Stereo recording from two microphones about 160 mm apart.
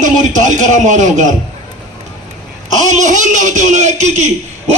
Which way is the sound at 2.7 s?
50° right (ahead or behind).